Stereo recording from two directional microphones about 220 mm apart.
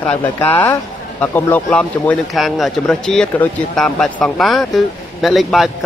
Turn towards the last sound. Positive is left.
turn(degrees=0)  # may be behind; listen again after turning